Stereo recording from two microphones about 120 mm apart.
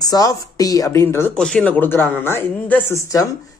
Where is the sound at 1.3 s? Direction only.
5° left (ahead or behind).